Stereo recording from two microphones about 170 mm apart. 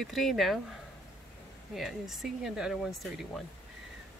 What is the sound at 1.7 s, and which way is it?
Speech, centre (ahead or behind).